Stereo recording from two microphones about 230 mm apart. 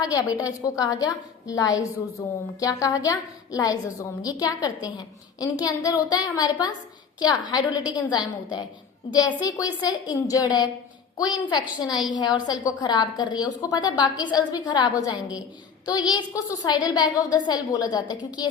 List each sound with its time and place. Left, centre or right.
0.1 s a woman's voice: centre